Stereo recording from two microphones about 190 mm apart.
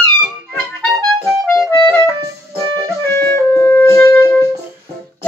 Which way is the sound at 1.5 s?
15° left (ahead or behind).